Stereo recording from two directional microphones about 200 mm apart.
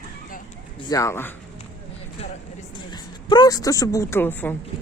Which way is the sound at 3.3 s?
20° left (ahead or behind).